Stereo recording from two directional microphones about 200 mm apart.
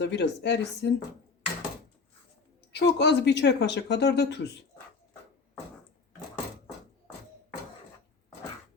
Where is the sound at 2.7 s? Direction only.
60° left (ahead or behind).